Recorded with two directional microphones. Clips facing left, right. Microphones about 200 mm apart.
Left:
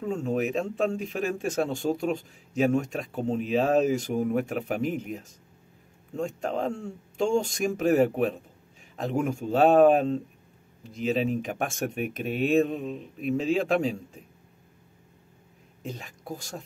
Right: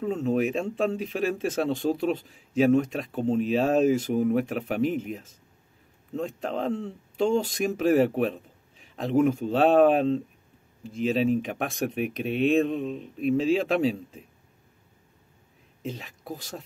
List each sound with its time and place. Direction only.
0.0 s a man's voice: centre (ahead or behind)
15.9 s a man's voice: centre (ahead or behind)